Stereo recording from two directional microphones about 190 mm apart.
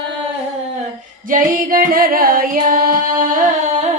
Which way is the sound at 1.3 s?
45° right (ahead or behind).